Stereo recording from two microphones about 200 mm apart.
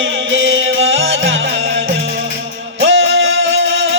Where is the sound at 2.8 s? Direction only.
75° right (ahead or behind).